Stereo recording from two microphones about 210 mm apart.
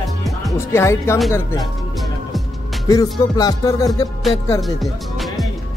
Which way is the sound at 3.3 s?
20° left (ahead or behind).